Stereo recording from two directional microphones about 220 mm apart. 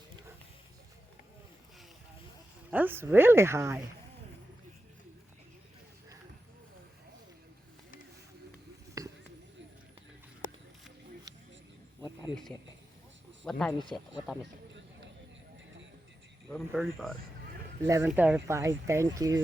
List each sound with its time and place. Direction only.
2.6 s speech: 10° right (ahead or behind)
9.0 s a sound: 15° right (ahead or behind)
13.4 s speech: 5° left (ahead or behind)
16.5 s speech: centre (ahead or behind)
17.8 s speech: 10° right (ahead or behind)